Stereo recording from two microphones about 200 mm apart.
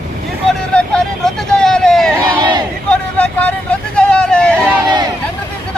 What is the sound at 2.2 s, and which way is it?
Crowd, 20° right (ahead or behind).